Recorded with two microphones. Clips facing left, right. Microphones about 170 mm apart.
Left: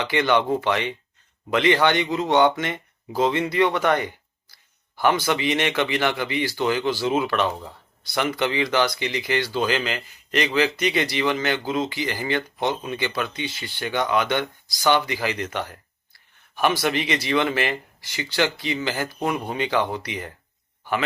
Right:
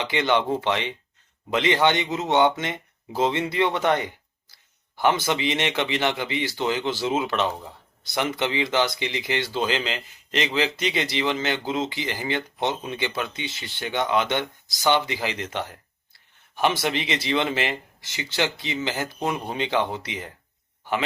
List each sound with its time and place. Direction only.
0.0 s speech: 20° right (ahead or behind)